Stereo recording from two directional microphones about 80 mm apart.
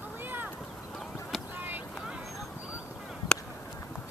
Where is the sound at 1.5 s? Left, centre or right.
Right.